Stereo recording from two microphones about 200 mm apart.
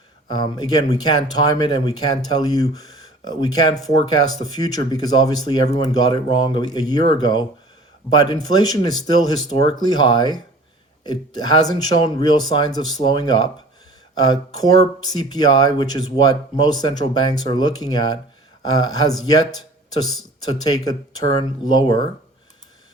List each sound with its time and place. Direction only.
0.3 s speech: 20° left (ahead or behind)